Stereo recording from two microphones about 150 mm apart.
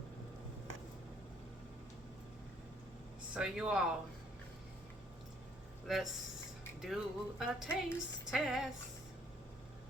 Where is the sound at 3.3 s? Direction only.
5° right (ahead or behind).